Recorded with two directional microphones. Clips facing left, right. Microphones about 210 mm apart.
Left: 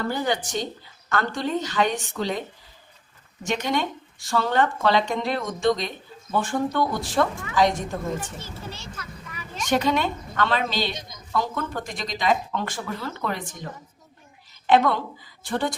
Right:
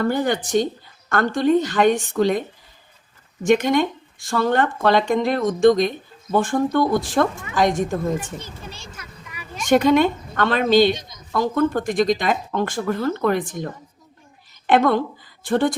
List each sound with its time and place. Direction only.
0.1 s speech: 50° right (ahead or behind)
3.4 s speech: 50° right (ahead or behind)
8.2 s a child's voice: 15° right (ahead or behind)
9.6 s speech: 50° right (ahead or behind)
14.7 s speech: 50° right (ahead or behind)